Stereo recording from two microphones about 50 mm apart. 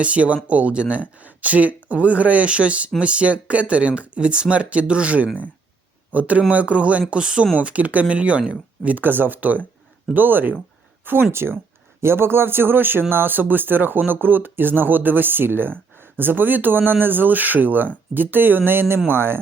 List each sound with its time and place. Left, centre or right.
0.0 s speech: right